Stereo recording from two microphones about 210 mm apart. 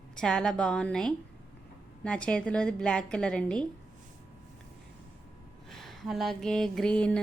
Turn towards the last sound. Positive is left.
turn(degrees=5)  # may be behind; listen again after turning